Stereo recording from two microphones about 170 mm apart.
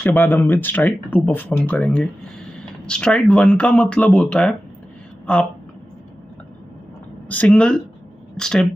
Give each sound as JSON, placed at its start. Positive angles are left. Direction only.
{"t": 0.0, "sound": "a woman's voice", "side_deg": 10}
{"t": 7.2, "sound": "speech", "side_deg": 5}